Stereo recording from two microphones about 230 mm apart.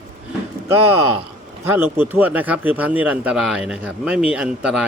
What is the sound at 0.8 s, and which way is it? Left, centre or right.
Speech, right.